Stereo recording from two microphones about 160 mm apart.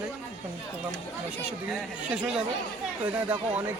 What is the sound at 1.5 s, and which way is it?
Speech, 5° right (ahead or behind).